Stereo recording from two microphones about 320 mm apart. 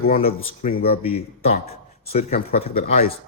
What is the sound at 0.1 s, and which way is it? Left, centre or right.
Speech, left.